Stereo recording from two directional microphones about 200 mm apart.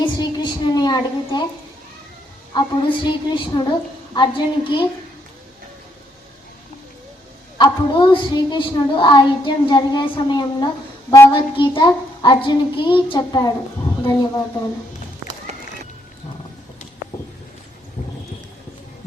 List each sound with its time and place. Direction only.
0.0 s a woman's voice: 20° left (ahead or behind)
2.6 s speech: 20° left (ahead or behind)
7.6 s speech: 20° left (ahead or behind)